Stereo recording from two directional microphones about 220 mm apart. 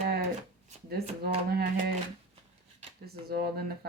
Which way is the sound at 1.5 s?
45° right (ahead or behind).